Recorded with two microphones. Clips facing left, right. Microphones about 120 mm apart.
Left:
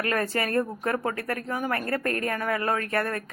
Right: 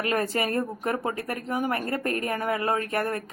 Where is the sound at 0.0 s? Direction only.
20° right (ahead or behind).